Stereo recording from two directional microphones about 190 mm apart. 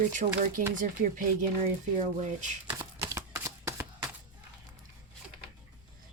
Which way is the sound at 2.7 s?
15° right (ahead or behind).